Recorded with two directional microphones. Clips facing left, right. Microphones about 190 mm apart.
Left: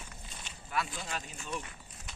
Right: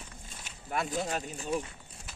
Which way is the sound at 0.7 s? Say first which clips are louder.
Right 5 dB; 45° right (ahead or behind).